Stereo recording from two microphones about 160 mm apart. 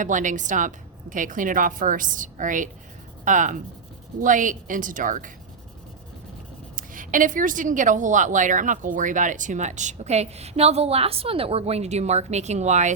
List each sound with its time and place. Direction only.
0.0 s a woman's voice: 50° right (ahead or behind)
6.7 s a woman's voice: 55° right (ahead or behind)